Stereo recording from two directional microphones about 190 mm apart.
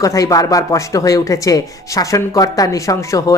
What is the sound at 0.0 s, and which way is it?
Speech, 15° left (ahead or behind).